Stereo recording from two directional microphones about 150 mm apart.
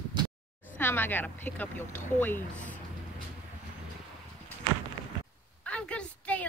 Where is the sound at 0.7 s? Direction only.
15° left (ahead or behind).